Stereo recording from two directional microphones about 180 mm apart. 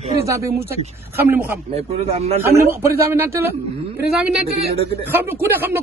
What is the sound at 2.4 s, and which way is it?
Speech, 15° right (ahead or behind).